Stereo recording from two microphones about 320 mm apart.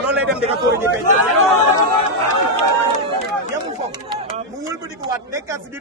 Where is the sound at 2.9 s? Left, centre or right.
Left.